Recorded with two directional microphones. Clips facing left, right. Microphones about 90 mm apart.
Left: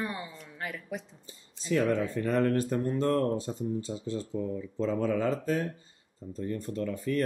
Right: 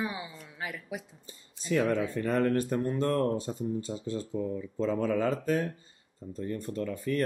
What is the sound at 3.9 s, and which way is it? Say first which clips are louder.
Speech: even; 40° right (ahead or behind).